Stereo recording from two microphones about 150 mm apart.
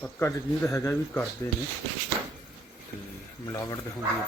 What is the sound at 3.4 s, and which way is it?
Speech, 25° left (ahead or behind).